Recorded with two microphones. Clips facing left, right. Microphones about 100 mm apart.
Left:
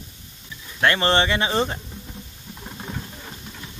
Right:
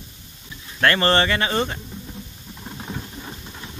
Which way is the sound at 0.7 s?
10° left (ahead or behind).